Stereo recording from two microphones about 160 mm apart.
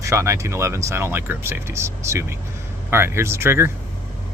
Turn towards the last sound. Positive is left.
turn(degrees=-15)  # may be behind; listen again after turning